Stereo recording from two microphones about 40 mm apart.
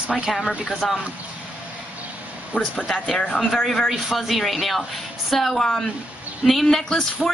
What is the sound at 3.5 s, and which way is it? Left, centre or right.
A woman's voice, centre.